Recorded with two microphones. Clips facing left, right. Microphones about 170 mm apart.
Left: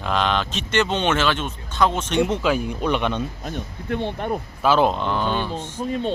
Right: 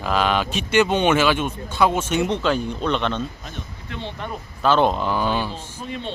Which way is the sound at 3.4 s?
50° left (ahead or behind).